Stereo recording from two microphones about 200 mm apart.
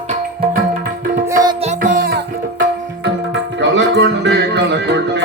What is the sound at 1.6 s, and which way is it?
Music, 40° right (ahead or behind).